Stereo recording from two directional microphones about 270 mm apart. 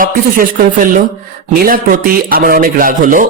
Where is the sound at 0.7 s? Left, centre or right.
Right.